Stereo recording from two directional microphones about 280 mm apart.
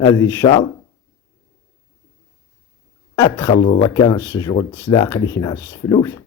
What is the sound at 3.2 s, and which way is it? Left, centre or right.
Speech, centre.